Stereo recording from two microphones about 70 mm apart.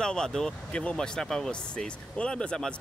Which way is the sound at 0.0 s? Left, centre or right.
Centre.